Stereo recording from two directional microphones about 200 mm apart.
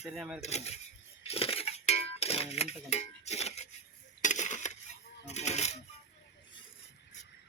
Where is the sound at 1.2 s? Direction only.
30° left (ahead or behind).